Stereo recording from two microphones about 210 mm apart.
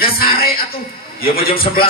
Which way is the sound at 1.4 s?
45° left (ahead or behind).